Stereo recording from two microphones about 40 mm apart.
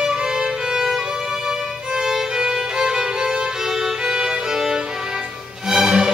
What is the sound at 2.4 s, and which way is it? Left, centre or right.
Music, centre.